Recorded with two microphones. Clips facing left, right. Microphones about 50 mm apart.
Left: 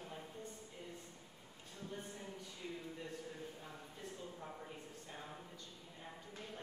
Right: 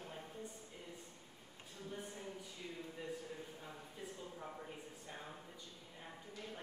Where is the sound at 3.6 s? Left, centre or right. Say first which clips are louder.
Right 1 dB; centre.